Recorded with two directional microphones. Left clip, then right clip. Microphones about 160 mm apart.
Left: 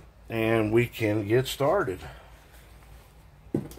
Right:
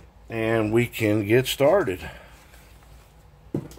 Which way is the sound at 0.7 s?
35° right (ahead or behind).